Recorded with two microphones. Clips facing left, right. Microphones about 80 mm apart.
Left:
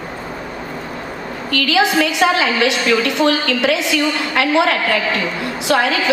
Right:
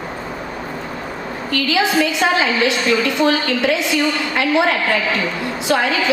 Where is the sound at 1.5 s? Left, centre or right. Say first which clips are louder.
Left 2 dB; left.